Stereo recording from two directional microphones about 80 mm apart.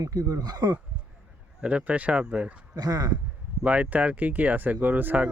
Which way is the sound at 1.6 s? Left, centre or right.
Centre.